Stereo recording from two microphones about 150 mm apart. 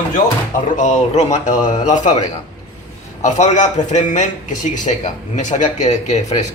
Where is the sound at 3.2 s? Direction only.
50° left (ahead or behind).